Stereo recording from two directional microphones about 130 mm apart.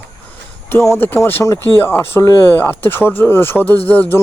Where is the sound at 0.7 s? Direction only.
20° left (ahead or behind).